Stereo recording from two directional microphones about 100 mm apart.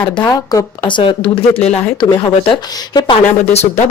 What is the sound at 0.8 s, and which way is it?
Speech, 55° left (ahead or behind).